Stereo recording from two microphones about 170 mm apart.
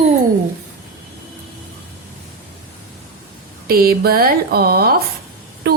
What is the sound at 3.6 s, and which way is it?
Speech, 60° right (ahead or behind).